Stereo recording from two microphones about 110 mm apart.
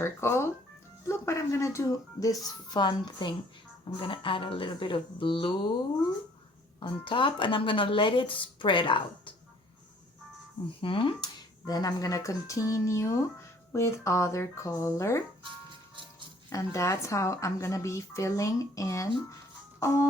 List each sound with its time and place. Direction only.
0.0 s a woman's voice: 25° left (ahead or behind); by 5.7 s 50° left (ahead or behind)
6.7 s speech: 50° left (ahead or behind)
10.8 s speech: 50° left (ahead or behind)
11.2 s a woman's voice: 35° left (ahead or behind)
16.5 s a woman's voice: 30° left (ahead or behind)
19.8 s music: 25° left (ahead or behind)